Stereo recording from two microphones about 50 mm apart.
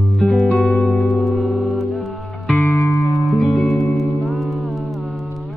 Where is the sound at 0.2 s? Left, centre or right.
Centre.